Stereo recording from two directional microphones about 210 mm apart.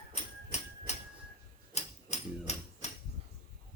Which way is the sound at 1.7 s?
30° left (ahead or behind).